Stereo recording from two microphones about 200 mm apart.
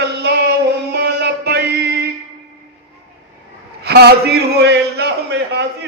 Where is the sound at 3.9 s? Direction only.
50° right (ahead or behind).